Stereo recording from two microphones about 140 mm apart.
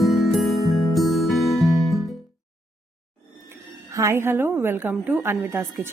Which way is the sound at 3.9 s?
20° right (ahead or behind).